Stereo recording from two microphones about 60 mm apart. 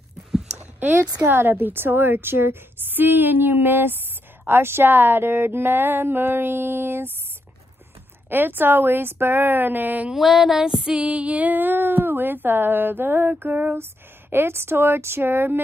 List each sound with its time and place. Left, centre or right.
0.6 s a sound: right
1.2 s speech: right
8.3 s speech: right
10.1 s music: centre
11.0 s speech: centre; by 15.6 s right